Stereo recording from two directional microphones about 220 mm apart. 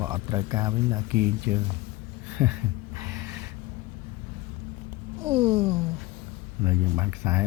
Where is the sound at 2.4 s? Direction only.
5° right (ahead or behind).